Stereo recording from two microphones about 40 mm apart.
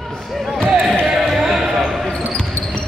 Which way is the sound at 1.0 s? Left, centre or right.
Centre.